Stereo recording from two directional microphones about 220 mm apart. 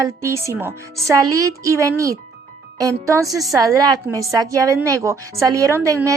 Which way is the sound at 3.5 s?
15° right (ahead or behind).